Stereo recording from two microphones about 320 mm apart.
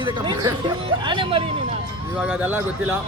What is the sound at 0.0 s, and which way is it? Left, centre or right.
Speech, centre.